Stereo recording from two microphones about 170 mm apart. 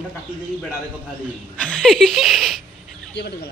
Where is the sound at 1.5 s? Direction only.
5° left (ahead or behind).